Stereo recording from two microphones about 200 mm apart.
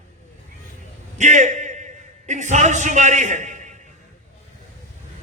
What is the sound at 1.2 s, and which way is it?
A man's voice, 35° right (ahead or behind).